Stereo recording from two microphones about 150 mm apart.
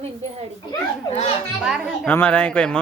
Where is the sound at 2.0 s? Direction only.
10° left (ahead or behind).